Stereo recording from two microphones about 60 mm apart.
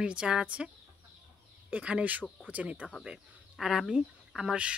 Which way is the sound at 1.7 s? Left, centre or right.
Right.